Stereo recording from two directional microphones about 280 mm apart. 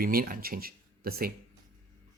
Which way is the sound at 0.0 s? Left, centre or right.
Right.